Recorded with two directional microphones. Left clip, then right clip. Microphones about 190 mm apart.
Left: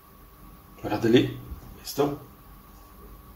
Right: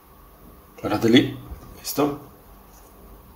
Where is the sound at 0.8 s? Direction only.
45° right (ahead or behind).